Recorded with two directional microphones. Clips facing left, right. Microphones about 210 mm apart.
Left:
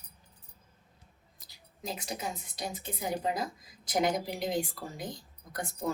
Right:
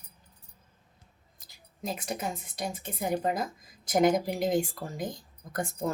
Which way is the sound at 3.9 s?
50° right (ahead or behind).